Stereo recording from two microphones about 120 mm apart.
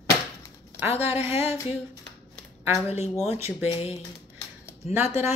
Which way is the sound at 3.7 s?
55° left (ahead or behind).